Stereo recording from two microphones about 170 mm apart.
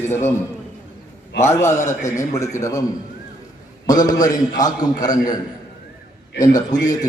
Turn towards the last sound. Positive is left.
turn(degrees=20)  # may be behind; listen again after turning